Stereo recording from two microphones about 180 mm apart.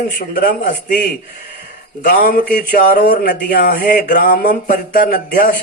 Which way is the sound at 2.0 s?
50° left (ahead or behind).